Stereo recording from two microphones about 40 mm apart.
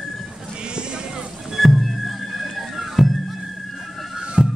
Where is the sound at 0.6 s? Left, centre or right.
Right.